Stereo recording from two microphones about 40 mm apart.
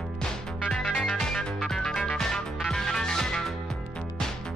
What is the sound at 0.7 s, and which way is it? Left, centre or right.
Music, left.